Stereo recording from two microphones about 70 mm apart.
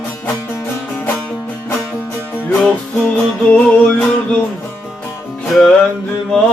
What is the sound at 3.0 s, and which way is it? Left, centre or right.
Music, centre.